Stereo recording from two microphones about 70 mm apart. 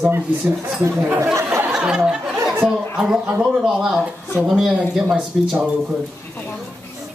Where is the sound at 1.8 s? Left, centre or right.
Centre.